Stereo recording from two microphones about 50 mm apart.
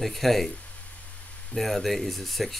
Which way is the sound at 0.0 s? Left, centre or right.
Centre.